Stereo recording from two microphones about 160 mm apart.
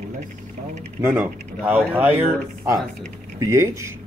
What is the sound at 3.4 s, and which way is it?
Speech, 20° right (ahead or behind).